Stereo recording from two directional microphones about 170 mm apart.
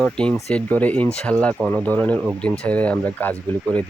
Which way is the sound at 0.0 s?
5° left (ahead or behind).